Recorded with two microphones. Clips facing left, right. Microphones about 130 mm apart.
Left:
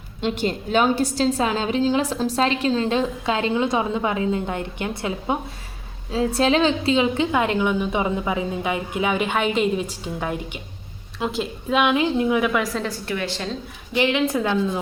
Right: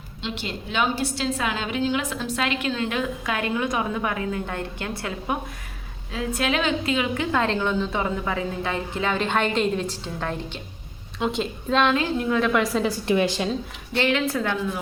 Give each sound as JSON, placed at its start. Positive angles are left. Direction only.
{"t": 0.2, "sound": "a woman's voice", "side_deg": 45}
{"t": 6.1, "sound": "a woman's voice", "side_deg": 30}
{"t": 7.3, "sound": "a woman's voice", "side_deg": 15}
{"t": 12.5, "sound": "a woman's voice", "side_deg": 0}
{"t": 13.1, "sound": "a woman's voice", "side_deg": -15}
{"t": 13.9, "sound": "a woman's voice", "side_deg": 15}